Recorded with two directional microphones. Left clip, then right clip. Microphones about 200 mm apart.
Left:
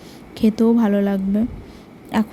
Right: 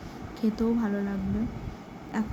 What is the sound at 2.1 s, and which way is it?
Speech, 40° left (ahead or behind).